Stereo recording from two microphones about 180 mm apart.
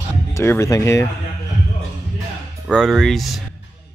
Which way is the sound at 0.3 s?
15° left (ahead or behind).